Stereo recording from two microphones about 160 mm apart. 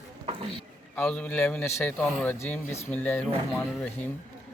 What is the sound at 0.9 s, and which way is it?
A man's voice, 5° left (ahead or behind).